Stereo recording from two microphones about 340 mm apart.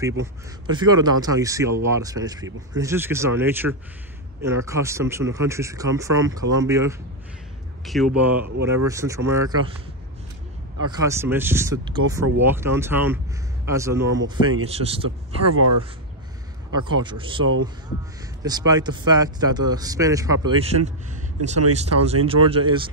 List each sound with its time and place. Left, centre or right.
0.2 s a man's voice: centre
10.9 s speech: centre
15.4 s speech: right
16.7 s speech: centre